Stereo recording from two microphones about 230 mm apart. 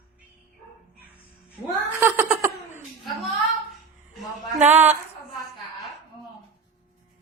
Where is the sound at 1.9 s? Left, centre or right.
Centre.